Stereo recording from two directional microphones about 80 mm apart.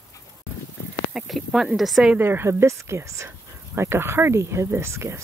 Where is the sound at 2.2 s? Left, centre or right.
Right.